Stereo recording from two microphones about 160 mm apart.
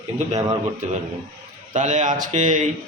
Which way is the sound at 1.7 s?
50° right (ahead or behind).